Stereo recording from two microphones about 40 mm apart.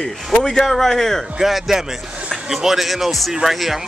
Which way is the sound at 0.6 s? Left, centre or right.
Centre.